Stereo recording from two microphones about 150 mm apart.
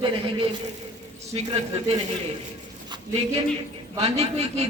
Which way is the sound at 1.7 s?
40° right (ahead or behind).